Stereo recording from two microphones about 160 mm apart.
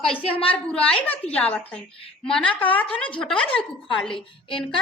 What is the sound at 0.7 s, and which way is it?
Speech, 5° left (ahead or behind).